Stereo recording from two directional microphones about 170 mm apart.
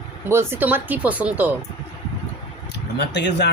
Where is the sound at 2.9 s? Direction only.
85° left.